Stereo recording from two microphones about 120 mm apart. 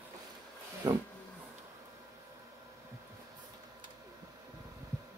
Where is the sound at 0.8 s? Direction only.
35° right (ahead or behind).